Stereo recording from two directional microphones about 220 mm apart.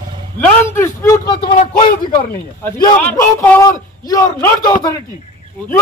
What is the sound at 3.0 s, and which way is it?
A man's voice, 10° left (ahead or behind).